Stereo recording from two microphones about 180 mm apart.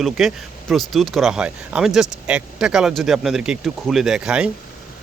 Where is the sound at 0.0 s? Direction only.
Centre (ahead or behind).